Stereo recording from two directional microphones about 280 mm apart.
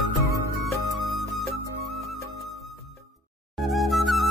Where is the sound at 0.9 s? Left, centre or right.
Centre.